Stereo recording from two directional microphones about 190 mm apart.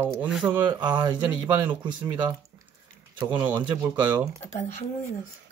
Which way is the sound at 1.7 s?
25° right (ahead or behind).